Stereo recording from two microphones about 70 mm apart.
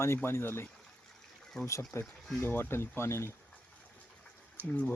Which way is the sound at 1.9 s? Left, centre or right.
Left.